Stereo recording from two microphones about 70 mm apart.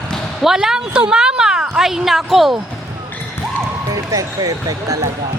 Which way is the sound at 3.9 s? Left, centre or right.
Right.